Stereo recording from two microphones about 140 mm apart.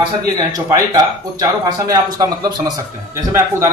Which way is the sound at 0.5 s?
25° right (ahead or behind).